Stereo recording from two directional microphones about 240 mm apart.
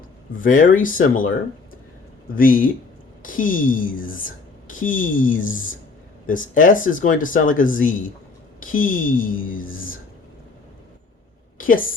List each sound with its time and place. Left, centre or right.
0.3 s speech: left
2.3 s speech: left
11.5 s a sound: left